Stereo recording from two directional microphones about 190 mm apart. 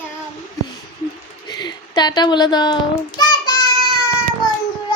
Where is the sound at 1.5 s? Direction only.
20° left (ahead or behind).